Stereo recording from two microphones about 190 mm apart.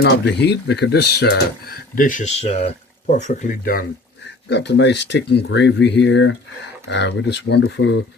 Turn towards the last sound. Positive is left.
turn(degrees=70)  # may be behind; listen again after turning